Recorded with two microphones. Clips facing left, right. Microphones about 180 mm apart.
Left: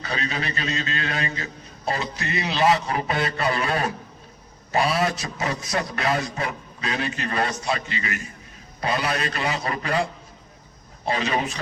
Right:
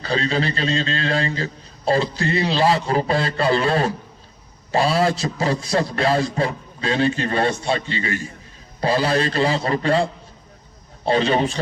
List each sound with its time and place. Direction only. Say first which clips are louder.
0.0 s a man's voice: right 7 dB; 30° right (ahead or behind)